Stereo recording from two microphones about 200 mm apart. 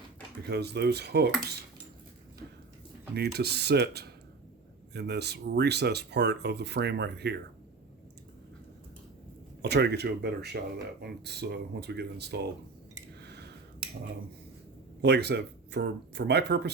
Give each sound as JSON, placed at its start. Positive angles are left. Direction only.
{"t": 0.4, "sound": "speech", "side_deg": -55}
{"t": 3.2, "sound": "speech", "side_deg": -55}
{"t": 9.6, "sound": "speech", "side_deg": -55}
{"t": 15.0, "sound": "speech", "side_deg": -55}